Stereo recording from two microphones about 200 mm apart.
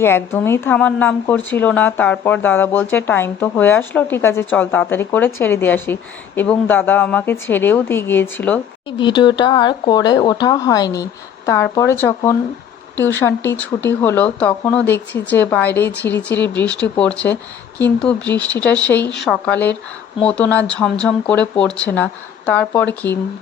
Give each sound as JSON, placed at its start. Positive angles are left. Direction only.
{"t": 0.0, "sound": "speech", "side_deg": 10}
{"t": 9.0, "sound": "speech", "side_deg": 25}